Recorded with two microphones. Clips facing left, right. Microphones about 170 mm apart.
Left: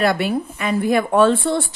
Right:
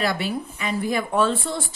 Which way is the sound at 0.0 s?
55° left (ahead or behind).